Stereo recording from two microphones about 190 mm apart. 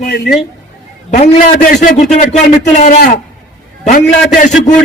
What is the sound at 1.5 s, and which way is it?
Speech, 55° left (ahead or behind).